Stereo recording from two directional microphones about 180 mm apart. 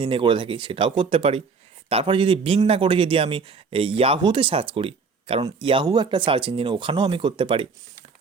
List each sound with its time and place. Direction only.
0.0 s a man's voice: 30° right (ahead or behind)